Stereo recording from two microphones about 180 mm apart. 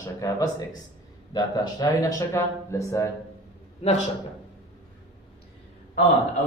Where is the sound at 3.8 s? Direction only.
40° left (ahead or behind).